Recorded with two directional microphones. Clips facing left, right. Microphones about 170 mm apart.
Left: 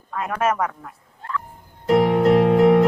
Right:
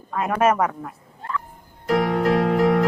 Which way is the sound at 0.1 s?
15° right (ahead or behind).